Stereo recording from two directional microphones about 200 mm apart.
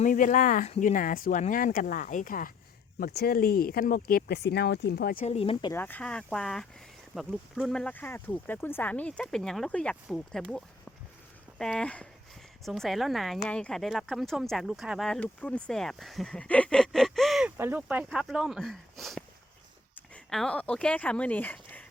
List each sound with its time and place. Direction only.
0.0 s speech: 40° left (ahead or behind)
5.2 s speech: 30° left (ahead or behind)
5.7 s speech: 10° left (ahead or behind)